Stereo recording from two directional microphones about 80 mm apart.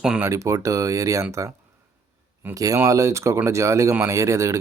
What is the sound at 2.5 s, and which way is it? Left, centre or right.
Speech, right.